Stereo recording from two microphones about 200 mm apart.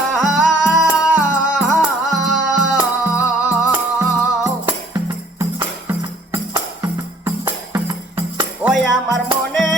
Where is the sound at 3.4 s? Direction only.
10° right (ahead or behind).